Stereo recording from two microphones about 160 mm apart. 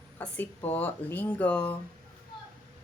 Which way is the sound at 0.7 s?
10° left (ahead or behind).